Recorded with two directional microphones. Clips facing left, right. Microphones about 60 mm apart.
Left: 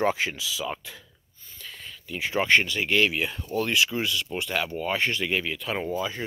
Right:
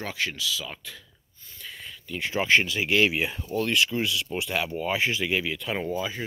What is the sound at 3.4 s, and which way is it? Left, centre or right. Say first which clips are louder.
Speech: left 1 dB; centre.